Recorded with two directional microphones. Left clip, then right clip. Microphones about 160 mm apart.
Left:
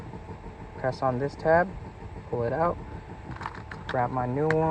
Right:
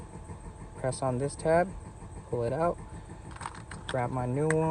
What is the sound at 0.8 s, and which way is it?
Speech, 20° right (ahead or behind).